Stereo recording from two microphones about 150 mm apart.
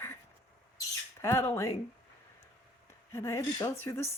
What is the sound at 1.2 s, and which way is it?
Speech, 20° left (ahead or behind).